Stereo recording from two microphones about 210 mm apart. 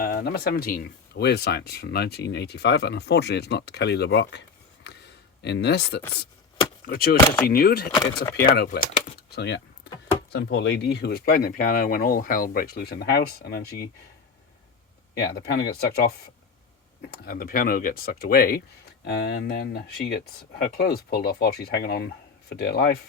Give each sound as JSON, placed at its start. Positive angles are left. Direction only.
{"t": 0.0, "sound": "speech", "side_deg": 45}
{"t": 7.3, "sound": "speech", "side_deg": 10}
{"t": 7.5, "sound": "speech", "side_deg": 45}
{"t": 15.2, "sound": "speech", "side_deg": 50}
{"t": 19.0, "sound": "speech", "side_deg": 55}